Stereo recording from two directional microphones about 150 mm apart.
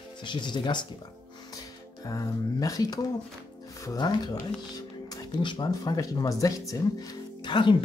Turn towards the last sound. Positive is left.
turn(degrees=30)  # may be behind; listen again after turning